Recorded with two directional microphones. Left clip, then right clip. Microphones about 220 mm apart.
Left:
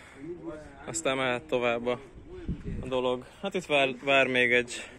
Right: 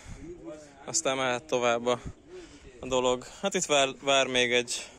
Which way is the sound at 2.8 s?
35° right (ahead or behind).